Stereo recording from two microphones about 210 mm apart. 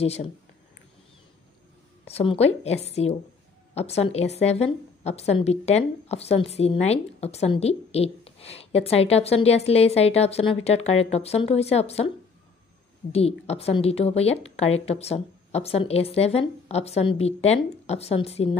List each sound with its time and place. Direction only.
0.0 s a woman's voice: 30° left (ahead or behind)
2.0 s a woman's voice: 30° left (ahead or behind)
13.1 s a woman's voice: 30° left (ahead or behind)